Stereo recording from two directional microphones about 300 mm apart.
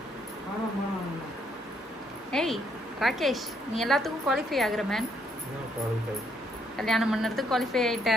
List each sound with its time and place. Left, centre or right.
2.3 s a woman's voice: centre
6.8 s a woman's voice: centre